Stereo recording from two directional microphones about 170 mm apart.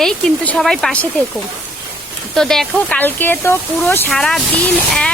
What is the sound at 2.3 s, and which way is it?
A woman's voice, 5° left (ahead or behind).